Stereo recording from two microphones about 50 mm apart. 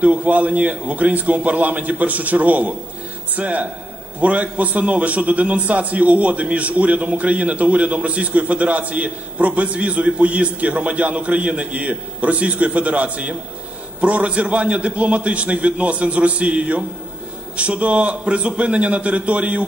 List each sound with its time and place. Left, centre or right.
0.0 s a man's voice: right